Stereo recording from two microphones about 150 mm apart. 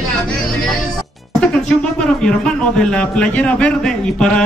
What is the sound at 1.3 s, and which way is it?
Speech, 5° left (ahead or behind).